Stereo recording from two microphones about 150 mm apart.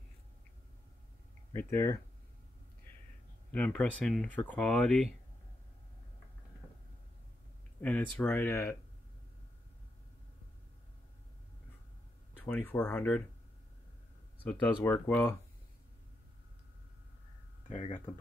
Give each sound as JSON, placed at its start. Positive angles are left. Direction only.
{"t": 1.5, "sound": "speech", "side_deg": 15}
{"t": 3.5, "sound": "speech", "side_deg": 10}
{"t": 7.8, "sound": "speech", "side_deg": 10}
{"t": 12.4, "sound": "speech", "side_deg": 10}
{"t": 14.4, "sound": "speech", "side_deg": 10}
{"t": 17.6, "sound": "speech", "side_deg": 45}